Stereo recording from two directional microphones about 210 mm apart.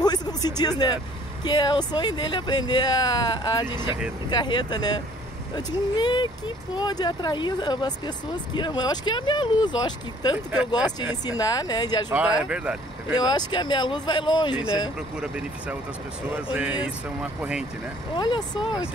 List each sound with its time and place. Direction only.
0.0 s music: 20° left (ahead or behind)
1.4 s speech: 20° left (ahead or behind)
10.3 s speech: 5° right (ahead or behind)
11.2 s speech: 20° left (ahead or behind)
12.1 s speech: 5° right (ahead or behind)
13.1 s speech: 20° left (ahead or behind)
15.1 s speech: 5° right (ahead or behind)
18.1 s speech: 20° left (ahead or behind)